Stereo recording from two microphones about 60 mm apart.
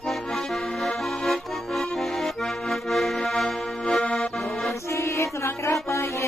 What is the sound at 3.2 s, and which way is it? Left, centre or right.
Music, centre.